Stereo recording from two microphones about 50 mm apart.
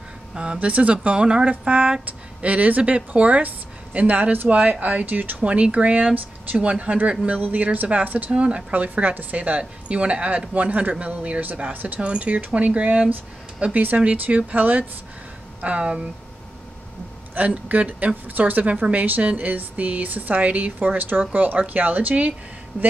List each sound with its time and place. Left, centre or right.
0.3 s a woman's voice: right
8.7 s a woman's voice: right
12.0 s a woman's voice: right
15.6 s a woman's voice: right
17.5 s a woman's voice: right